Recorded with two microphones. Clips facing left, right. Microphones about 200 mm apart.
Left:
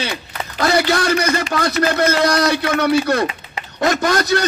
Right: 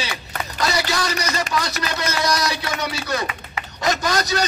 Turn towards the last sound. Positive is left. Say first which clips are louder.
# left 5 dB
turn(degrees=55)  # may be behind; listen again after turning